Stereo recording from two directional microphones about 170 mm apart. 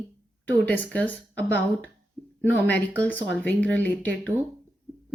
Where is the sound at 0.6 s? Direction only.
10° left (ahead or behind).